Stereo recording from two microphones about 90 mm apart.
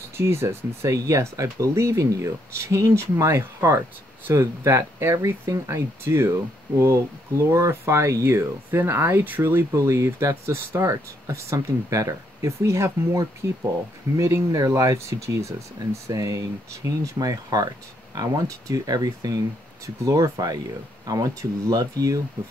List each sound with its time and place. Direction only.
0.2 s speech: 30° right (ahead or behind)
7.5 s speech: 35° right (ahead or behind)